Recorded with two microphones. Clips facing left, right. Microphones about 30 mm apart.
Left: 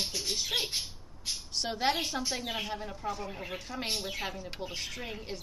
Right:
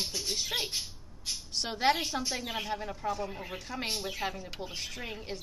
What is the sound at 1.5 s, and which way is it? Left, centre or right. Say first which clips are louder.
A woman's voice: right 2 dB; centre.